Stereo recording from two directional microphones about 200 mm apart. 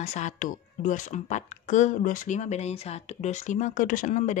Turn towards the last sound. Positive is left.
turn(degrees=40)  # may be behind; listen again after turning